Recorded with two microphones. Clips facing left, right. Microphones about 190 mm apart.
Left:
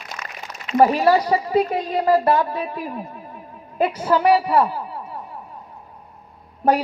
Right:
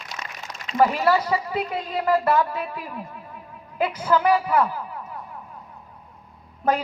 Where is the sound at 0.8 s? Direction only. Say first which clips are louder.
Left 4 dB; 30° left (ahead or behind).